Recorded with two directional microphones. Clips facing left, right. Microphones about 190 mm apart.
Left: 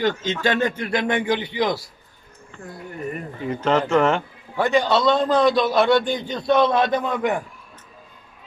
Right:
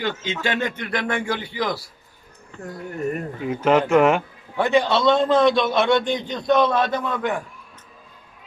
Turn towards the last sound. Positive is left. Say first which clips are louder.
# left 2 dB
turn(degrees=15)  # may be behind; listen again after turning